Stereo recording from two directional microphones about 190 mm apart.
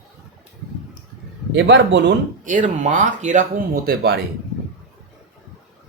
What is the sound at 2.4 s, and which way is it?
Speech, 40° right (ahead or behind).